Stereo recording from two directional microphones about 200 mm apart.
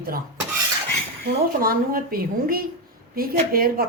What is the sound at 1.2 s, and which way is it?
A woman's voice, 45° right (ahead or behind).